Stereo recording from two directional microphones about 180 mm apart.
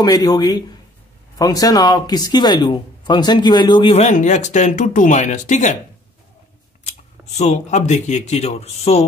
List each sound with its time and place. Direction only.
0.0 s speech: 20° left (ahead or behind)
3.9 s speech: 40° left (ahead or behind)
6.8 s speech: 40° left (ahead or behind)